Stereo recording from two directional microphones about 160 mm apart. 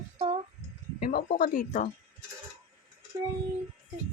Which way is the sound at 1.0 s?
60° left (ahead or behind).